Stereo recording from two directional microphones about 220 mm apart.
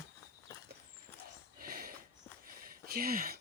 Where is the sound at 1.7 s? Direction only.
40° right (ahead or behind).